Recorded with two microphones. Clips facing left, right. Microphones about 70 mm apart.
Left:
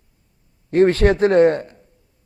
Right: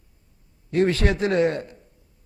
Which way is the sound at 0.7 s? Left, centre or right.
Left.